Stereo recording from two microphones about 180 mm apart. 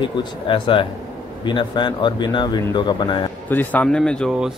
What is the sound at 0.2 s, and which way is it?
Speech, 30° left (ahead or behind).